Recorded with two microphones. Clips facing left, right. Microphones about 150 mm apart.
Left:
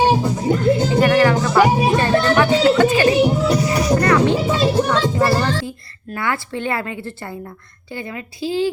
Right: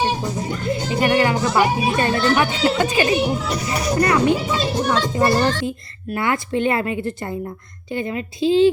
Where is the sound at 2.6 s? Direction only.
15° right (ahead or behind).